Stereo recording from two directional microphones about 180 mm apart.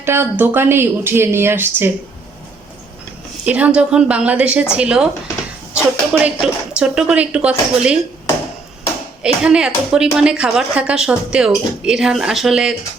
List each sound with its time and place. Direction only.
0.0 s speech: 15° right (ahead or behind)
3.4 s speech: 5° right (ahead or behind)
9.2 s speech: 5° right (ahead or behind)